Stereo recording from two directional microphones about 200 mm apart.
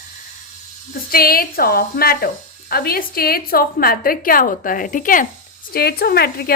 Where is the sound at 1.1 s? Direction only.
50° left (ahead or behind).